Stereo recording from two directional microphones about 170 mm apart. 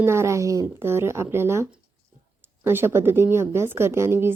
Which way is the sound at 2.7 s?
15° right (ahead or behind).